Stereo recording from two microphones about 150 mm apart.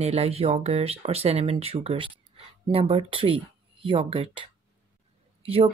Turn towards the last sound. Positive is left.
turn(degrees=-40)  # may be behind; listen again after turning